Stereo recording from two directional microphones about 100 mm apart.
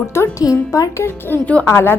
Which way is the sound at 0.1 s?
25° left (ahead or behind).